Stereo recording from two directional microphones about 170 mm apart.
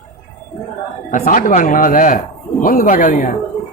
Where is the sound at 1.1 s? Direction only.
50° left (ahead or behind).